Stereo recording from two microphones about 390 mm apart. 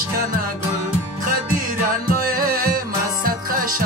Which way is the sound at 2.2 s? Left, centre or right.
Right.